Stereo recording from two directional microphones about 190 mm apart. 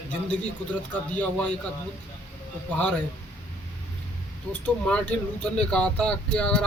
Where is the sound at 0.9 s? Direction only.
5° left (ahead or behind).